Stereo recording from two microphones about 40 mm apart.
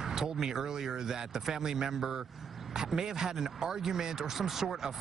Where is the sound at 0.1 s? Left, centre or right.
Centre.